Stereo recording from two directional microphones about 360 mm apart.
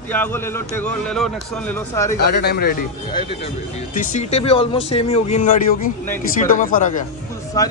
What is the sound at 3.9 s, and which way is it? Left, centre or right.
Speech, left.